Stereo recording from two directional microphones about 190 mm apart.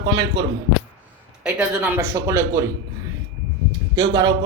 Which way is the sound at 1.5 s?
5° right (ahead or behind).